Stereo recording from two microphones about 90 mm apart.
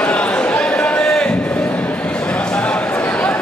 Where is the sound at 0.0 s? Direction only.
15° left (ahead or behind).